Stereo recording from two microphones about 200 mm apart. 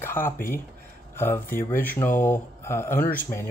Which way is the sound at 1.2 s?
10° left (ahead or behind).